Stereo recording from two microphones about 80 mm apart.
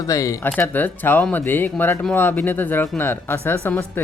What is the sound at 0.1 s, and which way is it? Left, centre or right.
Speech, left.